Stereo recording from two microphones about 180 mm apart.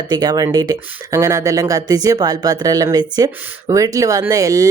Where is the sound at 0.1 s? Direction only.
20° right (ahead or behind).